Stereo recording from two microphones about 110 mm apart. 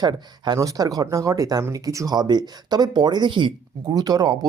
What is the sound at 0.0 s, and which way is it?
Speech, 40° right (ahead or behind).